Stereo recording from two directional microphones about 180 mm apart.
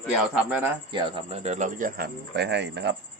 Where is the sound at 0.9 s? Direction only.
30° right (ahead or behind); by 2.1 s 45° right (ahead or behind).